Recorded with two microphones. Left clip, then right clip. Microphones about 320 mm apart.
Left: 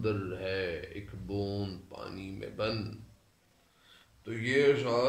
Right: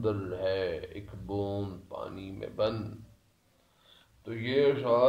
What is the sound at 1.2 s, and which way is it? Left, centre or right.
Speech, right.